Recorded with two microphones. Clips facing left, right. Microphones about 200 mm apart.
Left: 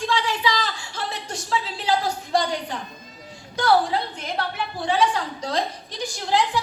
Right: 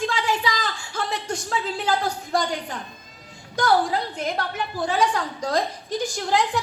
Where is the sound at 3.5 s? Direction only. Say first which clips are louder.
Left 1 dB; 45° right (ahead or behind).